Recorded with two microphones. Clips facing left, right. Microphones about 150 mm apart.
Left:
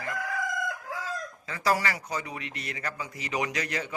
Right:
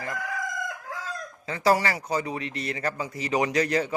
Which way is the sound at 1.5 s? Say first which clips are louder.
Right 5 dB; 30° right (ahead or behind).